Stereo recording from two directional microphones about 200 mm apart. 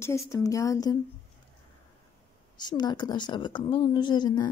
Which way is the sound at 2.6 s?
20° left (ahead or behind).